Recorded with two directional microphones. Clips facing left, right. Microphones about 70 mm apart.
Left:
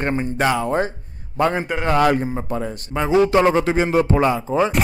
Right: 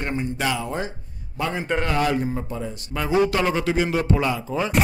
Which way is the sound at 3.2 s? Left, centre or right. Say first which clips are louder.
Left 6 dB; left.